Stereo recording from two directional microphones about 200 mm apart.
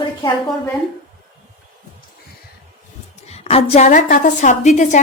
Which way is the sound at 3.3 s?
30° left (ahead or behind).